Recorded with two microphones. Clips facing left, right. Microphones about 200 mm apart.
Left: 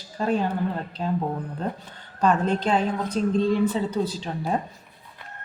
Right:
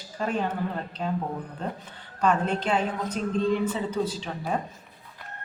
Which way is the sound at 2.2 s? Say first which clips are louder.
Left 3 dB; 35° left (ahead or behind).